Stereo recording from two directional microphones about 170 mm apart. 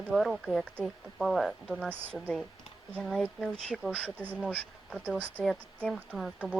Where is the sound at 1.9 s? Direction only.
10° right (ahead or behind).